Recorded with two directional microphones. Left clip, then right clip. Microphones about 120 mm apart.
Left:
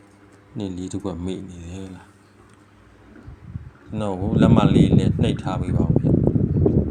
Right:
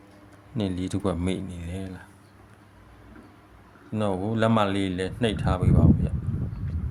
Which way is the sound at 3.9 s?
5° right (ahead or behind).